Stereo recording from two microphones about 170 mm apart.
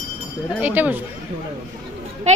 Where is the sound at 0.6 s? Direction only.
10° right (ahead or behind).